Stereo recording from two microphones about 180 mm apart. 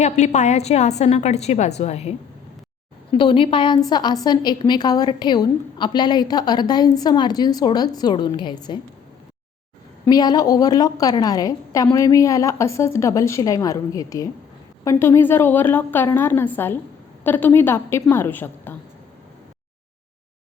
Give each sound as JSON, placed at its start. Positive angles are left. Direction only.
{"t": 0.0, "sound": "a woman's voice", "side_deg": 40}
{"t": 10.1, "sound": "a woman's voice", "side_deg": 20}